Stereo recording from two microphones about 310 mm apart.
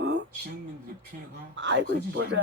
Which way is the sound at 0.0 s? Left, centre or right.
Right.